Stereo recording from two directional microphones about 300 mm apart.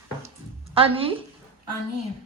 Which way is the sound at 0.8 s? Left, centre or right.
Centre.